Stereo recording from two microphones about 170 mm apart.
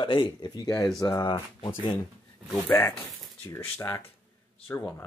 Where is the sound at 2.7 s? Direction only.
15° left (ahead or behind).